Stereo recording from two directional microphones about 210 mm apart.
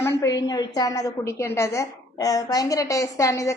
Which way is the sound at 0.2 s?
15° left (ahead or behind).